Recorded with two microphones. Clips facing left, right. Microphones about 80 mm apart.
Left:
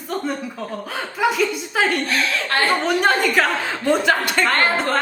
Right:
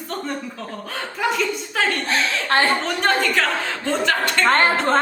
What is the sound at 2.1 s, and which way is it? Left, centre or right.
Speech, right.